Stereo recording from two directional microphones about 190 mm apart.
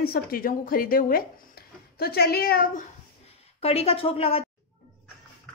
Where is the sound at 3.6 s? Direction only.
30° left (ahead or behind).